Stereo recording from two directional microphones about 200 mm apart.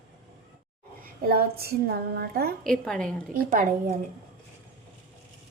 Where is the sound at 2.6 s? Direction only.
5° left (ahead or behind).